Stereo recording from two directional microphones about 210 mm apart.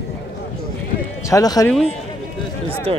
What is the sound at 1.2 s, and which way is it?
Speech, 15° left (ahead or behind).